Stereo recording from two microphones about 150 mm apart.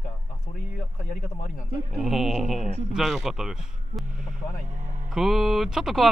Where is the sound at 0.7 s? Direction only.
65° left (ahead or behind).